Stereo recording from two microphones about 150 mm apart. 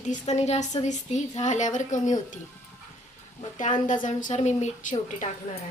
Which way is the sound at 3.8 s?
60° left (ahead or behind).